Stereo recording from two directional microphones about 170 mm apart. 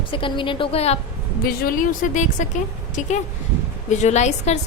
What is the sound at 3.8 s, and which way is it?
Speech, 40° left (ahead or behind).